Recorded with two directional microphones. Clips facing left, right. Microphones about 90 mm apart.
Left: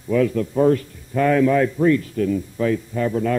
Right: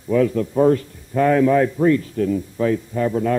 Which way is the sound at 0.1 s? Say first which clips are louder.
Right 1 dB; 30° right (ahead or behind).